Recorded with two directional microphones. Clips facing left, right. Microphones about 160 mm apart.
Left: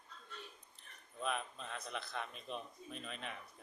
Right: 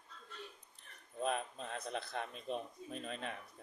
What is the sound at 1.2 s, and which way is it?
Speech, 40° right (ahead or behind).